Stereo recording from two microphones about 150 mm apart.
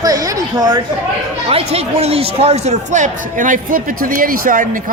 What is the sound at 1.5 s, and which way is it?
Speech, 45° right (ahead or behind).